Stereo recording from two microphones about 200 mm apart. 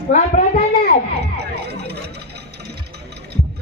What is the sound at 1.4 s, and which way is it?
Music, 55° right (ahead or behind).